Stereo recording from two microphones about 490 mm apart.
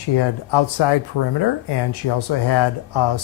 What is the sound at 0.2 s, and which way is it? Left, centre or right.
Speech, left.